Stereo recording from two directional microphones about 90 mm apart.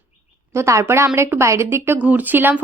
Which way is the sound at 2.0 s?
15° right (ahead or behind).